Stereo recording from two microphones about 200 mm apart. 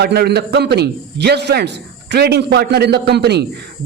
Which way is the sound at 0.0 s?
55° right (ahead or behind).